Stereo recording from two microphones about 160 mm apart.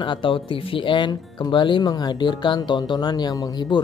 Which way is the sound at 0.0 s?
30° left (ahead or behind).